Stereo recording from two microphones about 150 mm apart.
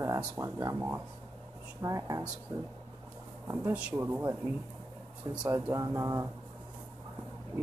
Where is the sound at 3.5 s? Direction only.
10° right (ahead or behind).